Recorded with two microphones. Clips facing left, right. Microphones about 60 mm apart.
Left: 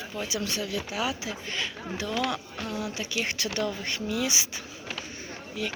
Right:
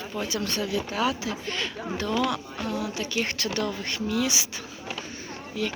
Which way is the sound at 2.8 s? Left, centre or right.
Left.